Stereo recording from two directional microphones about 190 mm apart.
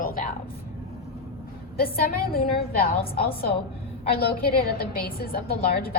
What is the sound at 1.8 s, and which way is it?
Speech, 50° left (ahead or behind).